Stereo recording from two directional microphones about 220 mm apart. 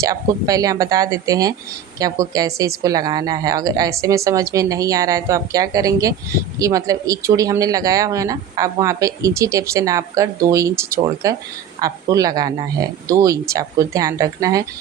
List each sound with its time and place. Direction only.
0.0 s speech: 15° right (ahead or behind)